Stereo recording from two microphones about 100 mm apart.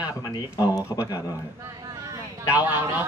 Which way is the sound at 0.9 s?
35° left (ahead or behind).